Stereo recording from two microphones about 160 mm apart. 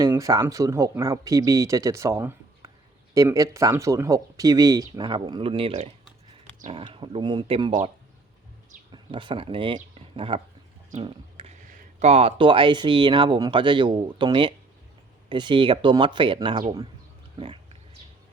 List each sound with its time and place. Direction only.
0.0 s speech: 20° right (ahead or behind)
6.7 s speech: 30° right (ahead or behind)
8.9 s speech: 30° right (ahead or behind)
11.0 s a sound: 35° right (ahead or behind)
11.7 s speech: 45° right (ahead or behind)
17.3 s a sound: 35° right (ahead or behind)